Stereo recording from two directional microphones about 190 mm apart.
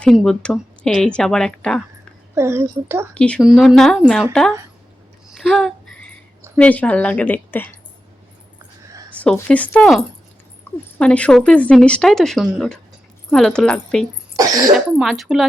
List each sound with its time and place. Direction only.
0.0 s speech: centre (ahead or behind)
2.3 s speech: 15° right (ahead or behind)
3.2 s speech: 5° left (ahead or behind)
5.3 s a sound: centre (ahead or behind)
6.6 s a woman's voice: 5° left (ahead or behind)
9.1 s a woman's voice: 5° left (ahead or behind)
14.3 s cough: 20° right (ahead or behind)
14.9 s speech: centre (ahead or behind)